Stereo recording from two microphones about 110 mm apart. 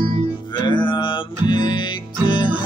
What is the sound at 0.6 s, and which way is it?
Music, 45° left (ahead or behind).